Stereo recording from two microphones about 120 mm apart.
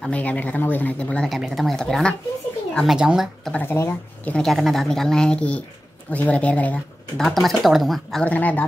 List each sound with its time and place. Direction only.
0.0 s speech: 10° left (ahead or behind); by 3.5 s 5° right (ahead or behind)
3.5 s a sound: 20° left (ahead or behind)
4.3 s speech: centre (ahead or behind)
7.2 s speech: centre (ahead or behind)
8.3 s speech: 15° left (ahead or behind)